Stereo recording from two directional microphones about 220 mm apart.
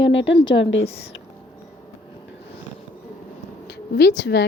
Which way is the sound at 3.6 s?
50° left (ahead or behind).